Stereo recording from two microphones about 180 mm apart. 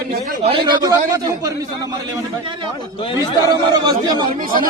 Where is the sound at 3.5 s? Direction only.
25° right (ahead or behind).